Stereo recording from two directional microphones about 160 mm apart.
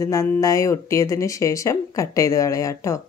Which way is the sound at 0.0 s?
20° left (ahead or behind).